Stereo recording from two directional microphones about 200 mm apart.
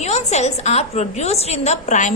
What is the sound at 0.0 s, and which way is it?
A woman's voice, 35° left (ahead or behind).